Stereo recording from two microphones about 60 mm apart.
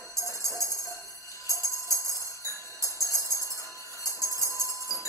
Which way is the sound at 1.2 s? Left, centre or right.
Left.